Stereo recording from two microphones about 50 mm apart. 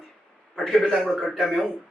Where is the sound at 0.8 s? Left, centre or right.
Centre.